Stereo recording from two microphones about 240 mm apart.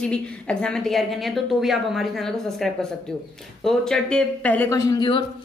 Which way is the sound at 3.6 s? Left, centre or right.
Centre.